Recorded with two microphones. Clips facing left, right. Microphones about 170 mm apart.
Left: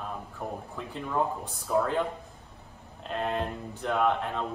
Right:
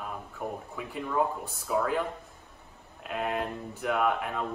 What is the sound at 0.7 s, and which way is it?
A man's voice, 10° right (ahead or behind).